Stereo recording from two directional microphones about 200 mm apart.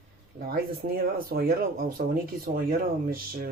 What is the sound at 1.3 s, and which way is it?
Speech, 50° right (ahead or behind).